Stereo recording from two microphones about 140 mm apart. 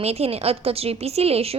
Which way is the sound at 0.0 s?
45° right (ahead or behind).